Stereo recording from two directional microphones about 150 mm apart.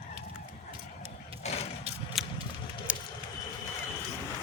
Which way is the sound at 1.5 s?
45° left (ahead or behind).